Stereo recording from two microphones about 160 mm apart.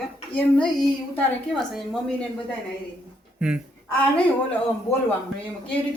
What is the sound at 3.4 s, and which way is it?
Speech, 5° right (ahead or behind).